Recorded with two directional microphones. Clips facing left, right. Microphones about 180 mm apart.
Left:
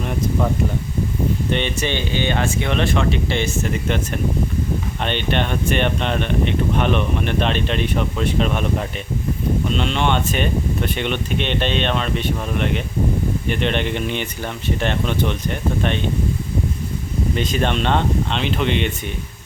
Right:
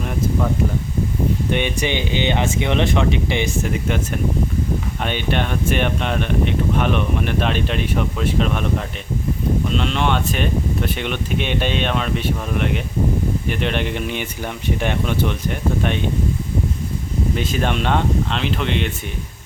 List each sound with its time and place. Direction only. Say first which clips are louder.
1.5 s speech: right 1 dB; 10° right (ahead or behind)
5.0 s speech: left 1 dB; 5° right (ahead or behind)
9.7 s speech: left 1 dB; centre (ahead or behind)
17.3 s speech: left 2 dB; 5° right (ahead or behind)